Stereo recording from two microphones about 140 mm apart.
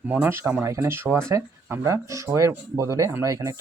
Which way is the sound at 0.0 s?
10° right (ahead or behind).